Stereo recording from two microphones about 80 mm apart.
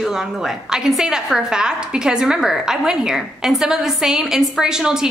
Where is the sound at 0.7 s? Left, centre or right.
Centre.